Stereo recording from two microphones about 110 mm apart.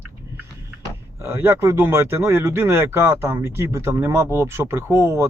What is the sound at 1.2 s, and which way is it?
Speech, 20° right (ahead or behind).